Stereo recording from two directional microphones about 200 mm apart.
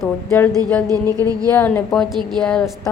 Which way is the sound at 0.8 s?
20° right (ahead or behind).